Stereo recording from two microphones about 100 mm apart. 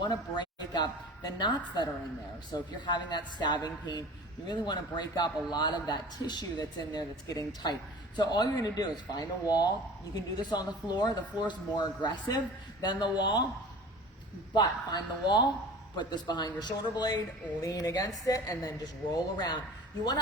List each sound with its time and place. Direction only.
0.0 s a woman's voice: 45° left (ahead or behind)
14.5 s a man's voice: 45° left (ahead or behind)